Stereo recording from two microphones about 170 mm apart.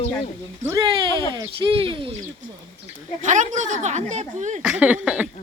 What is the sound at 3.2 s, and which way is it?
A woman's voice, 45° right (ahead or behind).